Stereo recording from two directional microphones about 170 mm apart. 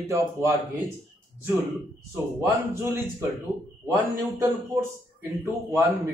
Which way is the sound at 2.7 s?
15° right (ahead or behind).